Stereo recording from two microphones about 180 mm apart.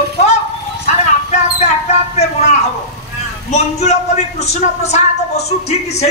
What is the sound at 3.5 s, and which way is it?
Speech, 35° left (ahead or behind).